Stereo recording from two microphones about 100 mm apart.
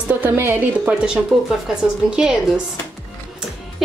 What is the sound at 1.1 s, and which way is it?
A woman's voice, 5° right (ahead or behind).